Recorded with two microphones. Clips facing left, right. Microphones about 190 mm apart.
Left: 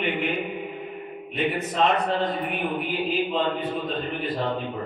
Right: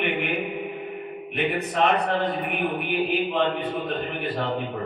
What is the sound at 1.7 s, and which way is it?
A man's voice, 60° right (ahead or behind).